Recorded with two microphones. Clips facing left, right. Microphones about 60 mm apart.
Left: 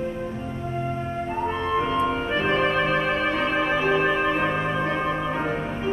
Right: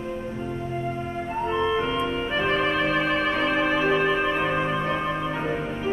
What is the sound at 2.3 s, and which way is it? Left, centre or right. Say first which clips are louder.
Music: right 1 dB; centre.